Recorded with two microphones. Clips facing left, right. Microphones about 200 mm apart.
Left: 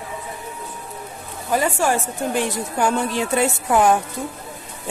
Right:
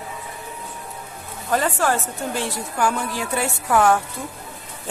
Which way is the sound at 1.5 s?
10° left (ahead or behind).